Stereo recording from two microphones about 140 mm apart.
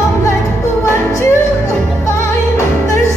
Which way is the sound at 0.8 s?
20° left (ahead or behind).